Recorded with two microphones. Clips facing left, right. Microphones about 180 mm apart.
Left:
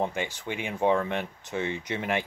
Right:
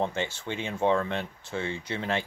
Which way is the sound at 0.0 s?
15° left (ahead or behind).